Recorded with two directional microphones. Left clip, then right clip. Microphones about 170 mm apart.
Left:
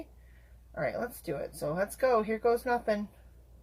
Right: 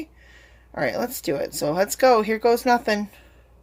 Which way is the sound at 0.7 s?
65° right (ahead or behind).